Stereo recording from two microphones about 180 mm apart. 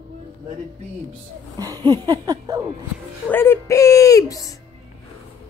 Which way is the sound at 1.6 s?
20° right (ahead or behind).